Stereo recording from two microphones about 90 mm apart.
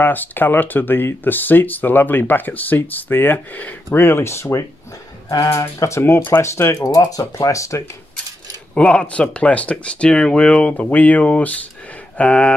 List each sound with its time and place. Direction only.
0.0 s speech: 20° left (ahead or behind)
5.3 s speech: 45° left (ahead or behind)
5.6 s speech: 30° left (ahead or behind)
8.7 s speech: 15° left (ahead or behind)